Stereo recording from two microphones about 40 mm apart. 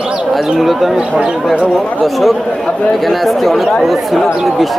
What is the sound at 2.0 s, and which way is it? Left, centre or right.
Speech, centre.